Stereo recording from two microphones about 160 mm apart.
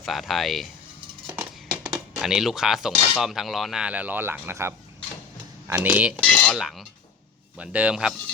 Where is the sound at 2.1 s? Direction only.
5° right (ahead or behind).